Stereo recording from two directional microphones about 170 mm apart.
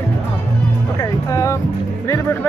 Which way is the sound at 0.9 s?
20° left (ahead or behind).